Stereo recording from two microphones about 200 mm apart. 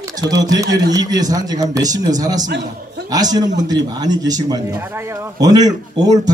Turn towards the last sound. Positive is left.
turn(degrees=-20)  # may be behind; listen again after turning